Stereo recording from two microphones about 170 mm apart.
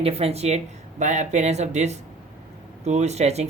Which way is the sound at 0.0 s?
35° right (ahead or behind).